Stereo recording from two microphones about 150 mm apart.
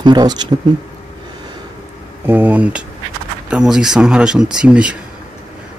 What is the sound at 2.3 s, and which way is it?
Speech, 10° right (ahead or behind).